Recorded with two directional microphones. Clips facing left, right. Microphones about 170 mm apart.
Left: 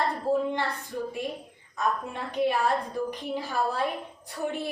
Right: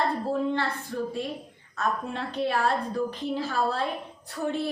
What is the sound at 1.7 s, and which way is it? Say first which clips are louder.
A woman's voice: even; 15° left (ahead or behind).